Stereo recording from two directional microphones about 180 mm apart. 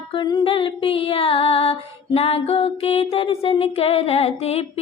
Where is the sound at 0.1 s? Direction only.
25° left (ahead or behind).